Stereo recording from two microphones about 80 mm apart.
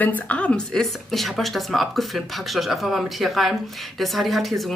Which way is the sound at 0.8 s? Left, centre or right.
Centre.